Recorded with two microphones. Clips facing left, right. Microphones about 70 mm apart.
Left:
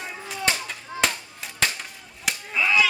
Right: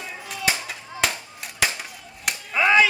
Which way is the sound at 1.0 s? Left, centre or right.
Centre.